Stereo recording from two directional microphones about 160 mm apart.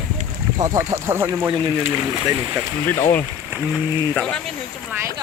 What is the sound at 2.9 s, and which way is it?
Speech, 15° left (ahead or behind).